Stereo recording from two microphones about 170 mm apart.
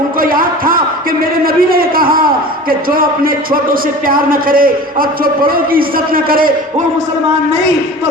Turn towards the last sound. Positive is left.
turn(degrees=-60)  # may be behind; listen again after turning